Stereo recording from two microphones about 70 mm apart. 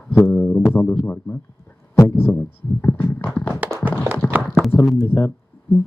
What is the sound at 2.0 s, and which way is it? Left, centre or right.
Speech, left.